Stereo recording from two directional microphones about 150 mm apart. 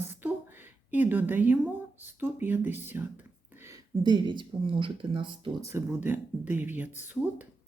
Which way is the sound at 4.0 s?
30° right (ahead or behind).